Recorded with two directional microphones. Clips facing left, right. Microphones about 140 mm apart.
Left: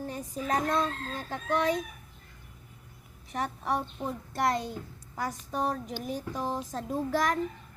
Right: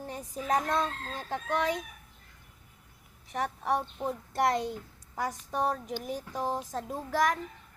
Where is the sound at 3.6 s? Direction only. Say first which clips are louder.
Right 2 dB; 15° right (ahead or behind).